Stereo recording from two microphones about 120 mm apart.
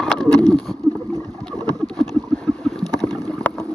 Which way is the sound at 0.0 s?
5° left (ahead or behind).